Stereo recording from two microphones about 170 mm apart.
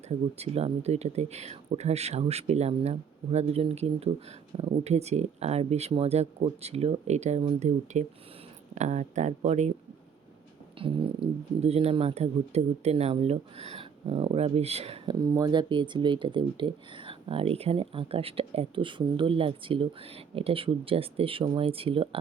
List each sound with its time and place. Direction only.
0.1 s speech: 35° right (ahead or behind)
10.8 s speech: 30° right (ahead or behind)
15.0 s speech: 20° right (ahead or behind)